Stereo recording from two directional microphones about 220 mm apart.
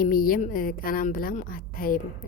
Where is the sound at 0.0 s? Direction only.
40° left (ahead or behind).